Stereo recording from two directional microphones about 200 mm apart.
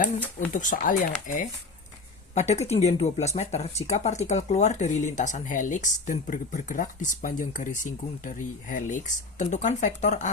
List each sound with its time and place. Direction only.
0.3 s speech: 40° left (ahead or behind)